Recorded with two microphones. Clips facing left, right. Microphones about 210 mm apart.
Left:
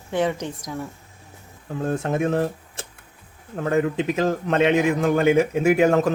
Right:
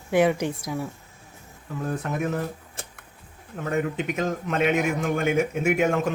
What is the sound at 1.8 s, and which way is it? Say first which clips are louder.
A man's voice: left 5 dB; 30° left (ahead or behind).